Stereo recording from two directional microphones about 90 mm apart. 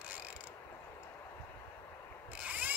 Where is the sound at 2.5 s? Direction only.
15° right (ahead or behind).